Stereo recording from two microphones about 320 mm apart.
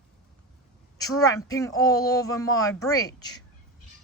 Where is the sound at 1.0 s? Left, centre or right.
Centre.